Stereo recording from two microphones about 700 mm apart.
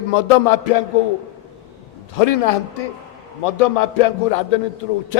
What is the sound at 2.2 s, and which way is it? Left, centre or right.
A man's voice, left.